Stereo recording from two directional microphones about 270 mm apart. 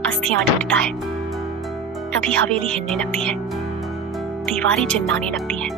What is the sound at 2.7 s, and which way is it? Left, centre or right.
Music, centre.